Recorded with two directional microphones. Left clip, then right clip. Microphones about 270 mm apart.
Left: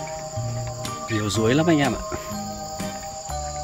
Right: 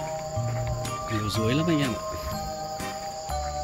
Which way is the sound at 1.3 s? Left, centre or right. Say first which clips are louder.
Left 7 dB; centre.